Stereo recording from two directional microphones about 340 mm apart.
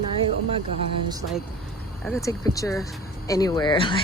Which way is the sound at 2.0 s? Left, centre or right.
Centre.